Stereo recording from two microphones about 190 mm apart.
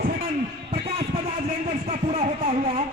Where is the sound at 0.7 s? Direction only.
30° right (ahead or behind).